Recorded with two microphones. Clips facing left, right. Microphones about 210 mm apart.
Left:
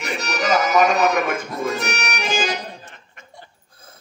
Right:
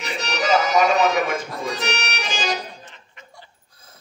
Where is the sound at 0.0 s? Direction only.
50° left (ahead or behind).